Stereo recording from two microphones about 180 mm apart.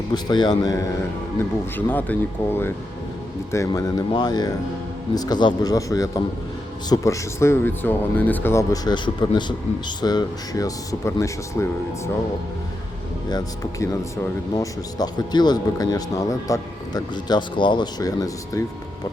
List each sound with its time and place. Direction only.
0.1 s speech: 25° left (ahead or behind)
1.7 s speech: 10° left (ahead or behind)
13.2 s speech: 20° left (ahead or behind)